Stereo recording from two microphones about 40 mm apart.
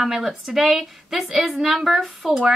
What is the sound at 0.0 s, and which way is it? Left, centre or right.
A woman's voice, centre.